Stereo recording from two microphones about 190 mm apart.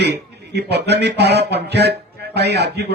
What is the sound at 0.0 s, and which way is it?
Speech, 60° right (ahead or behind).